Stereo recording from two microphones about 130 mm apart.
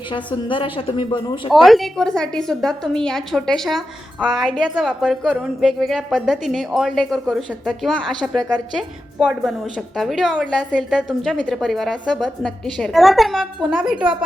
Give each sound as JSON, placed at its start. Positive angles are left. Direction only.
{"t": 0.1, "sound": "a woman's voice", "side_deg": 40}
{"t": 1.5, "sound": "a woman's voice", "side_deg": 0}